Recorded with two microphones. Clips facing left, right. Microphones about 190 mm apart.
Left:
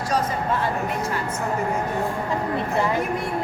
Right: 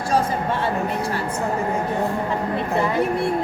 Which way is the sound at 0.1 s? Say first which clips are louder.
Right 3 dB; 30° right (ahead or behind).